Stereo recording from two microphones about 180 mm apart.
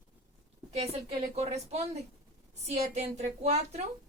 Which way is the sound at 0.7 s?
35° right (ahead or behind).